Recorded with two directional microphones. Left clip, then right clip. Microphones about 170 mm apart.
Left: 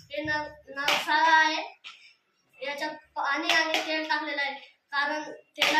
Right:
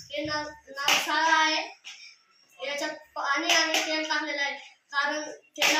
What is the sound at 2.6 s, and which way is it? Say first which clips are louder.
Speech: right 1 dB; 20° left (ahead or behind).